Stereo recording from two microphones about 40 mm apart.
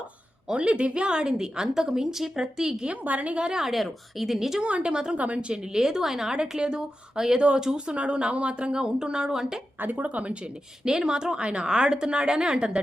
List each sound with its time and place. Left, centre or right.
0.6 s a woman's voice: right
3.0 s a woman's voice: right
3.4 s a woman's voice: centre
3.7 s speech: centre
4.6 s a woman's voice: right
5.1 s a woman's voice: right
5.7 s a woman's voice: centre
9.8 s speech: right
10.8 s a woman's voice: centre